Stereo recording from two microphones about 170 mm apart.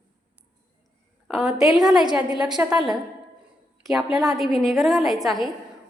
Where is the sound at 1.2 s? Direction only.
Centre (ahead or behind).